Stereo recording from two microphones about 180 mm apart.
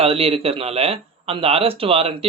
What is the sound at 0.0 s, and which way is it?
Speech, 30° right (ahead or behind).